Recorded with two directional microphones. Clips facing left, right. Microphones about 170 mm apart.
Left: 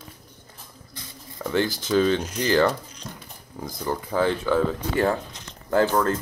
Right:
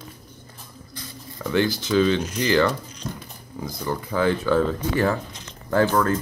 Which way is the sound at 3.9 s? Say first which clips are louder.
Right 1 dB; 30° left (ahead or behind).